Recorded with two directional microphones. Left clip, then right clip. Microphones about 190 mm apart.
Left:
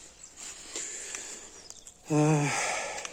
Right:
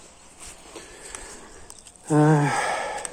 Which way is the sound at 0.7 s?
40° left (ahead or behind).